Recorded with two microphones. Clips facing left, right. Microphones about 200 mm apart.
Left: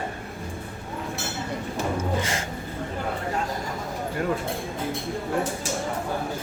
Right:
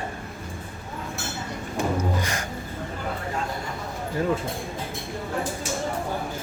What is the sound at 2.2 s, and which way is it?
Music, 25° left (ahead or behind).